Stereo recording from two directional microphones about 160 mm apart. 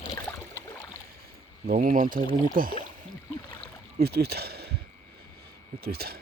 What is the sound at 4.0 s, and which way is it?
Speech, 85° right.